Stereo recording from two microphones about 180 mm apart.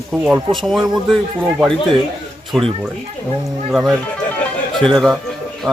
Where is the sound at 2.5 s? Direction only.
Centre (ahead or behind).